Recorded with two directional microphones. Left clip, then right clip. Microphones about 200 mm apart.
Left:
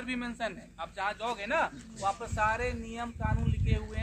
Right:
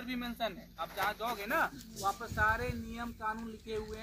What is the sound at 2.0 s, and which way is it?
Speech, 20° left (ahead or behind).